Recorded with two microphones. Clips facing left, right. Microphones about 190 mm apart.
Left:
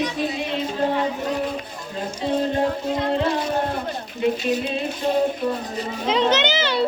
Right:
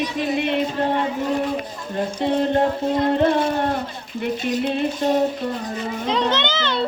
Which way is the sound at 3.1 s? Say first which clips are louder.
Right 4 dB; 55° right (ahead or behind).